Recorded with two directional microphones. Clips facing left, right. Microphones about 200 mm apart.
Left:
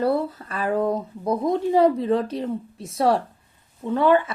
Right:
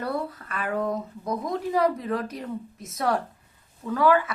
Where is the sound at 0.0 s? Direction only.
30° left (ahead or behind).